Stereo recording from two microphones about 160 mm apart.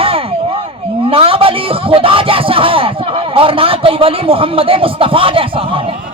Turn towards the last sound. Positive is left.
turn(degrees=-35)  # may be behind; listen again after turning